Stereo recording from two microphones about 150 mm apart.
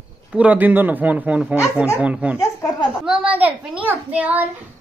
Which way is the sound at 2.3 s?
25° left (ahead or behind).